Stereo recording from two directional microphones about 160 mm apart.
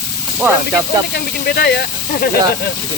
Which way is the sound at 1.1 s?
75° left (ahead or behind).